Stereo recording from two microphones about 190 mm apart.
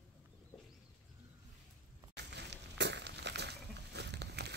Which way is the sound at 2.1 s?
65° right (ahead or behind).